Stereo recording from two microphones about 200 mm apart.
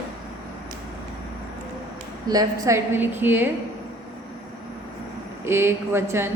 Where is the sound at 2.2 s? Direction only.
20° right (ahead or behind).